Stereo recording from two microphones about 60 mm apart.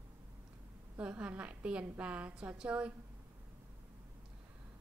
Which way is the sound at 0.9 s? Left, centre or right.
Right.